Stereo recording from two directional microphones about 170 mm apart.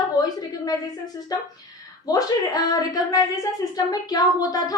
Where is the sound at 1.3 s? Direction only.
20° left (ahead or behind).